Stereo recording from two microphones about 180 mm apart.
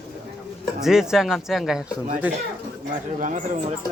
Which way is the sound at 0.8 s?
5° right (ahead or behind).